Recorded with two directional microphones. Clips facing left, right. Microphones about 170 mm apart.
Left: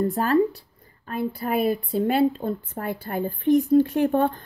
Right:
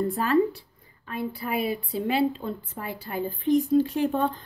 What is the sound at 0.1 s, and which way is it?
A woman's voice, 40° left (ahead or behind).